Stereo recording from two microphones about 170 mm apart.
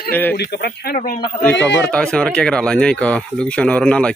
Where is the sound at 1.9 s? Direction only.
5° left (ahead or behind).